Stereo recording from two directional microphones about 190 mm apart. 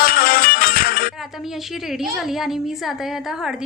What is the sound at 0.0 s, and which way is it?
Music, 50° left (ahead or behind).